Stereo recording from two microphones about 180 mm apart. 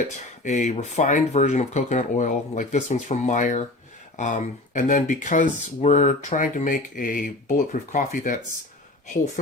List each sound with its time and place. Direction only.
0.4 s speech: 45° left (ahead or behind)